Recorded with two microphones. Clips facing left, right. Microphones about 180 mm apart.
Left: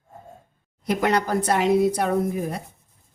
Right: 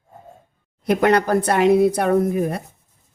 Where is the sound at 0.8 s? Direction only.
60° right (ahead or behind).